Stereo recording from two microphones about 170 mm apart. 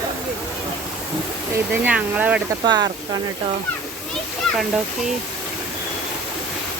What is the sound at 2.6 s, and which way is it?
Speech, 25° right (ahead or behind).